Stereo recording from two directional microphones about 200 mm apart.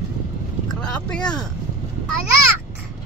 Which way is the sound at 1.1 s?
5° left (ahead or behind).